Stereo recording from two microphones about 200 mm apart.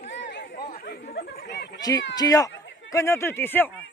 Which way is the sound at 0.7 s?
50° left (ahead or behind).